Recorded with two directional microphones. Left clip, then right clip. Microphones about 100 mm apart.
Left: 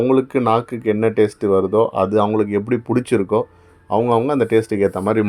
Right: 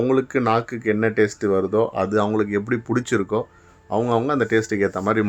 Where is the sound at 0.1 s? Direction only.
15° left (ahead or behind).